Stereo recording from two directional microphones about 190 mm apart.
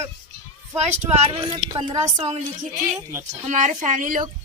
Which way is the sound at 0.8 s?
35° right (ahead or behind).